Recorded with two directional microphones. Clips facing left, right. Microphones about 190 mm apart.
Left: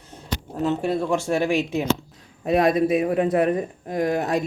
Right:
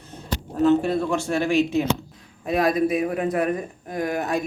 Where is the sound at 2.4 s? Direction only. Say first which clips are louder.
Left 2 dB; 30° left (ahead or behind).